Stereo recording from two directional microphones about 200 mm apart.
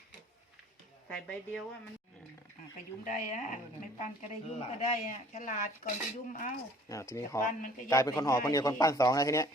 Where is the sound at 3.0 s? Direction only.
40° left (ahead or behind).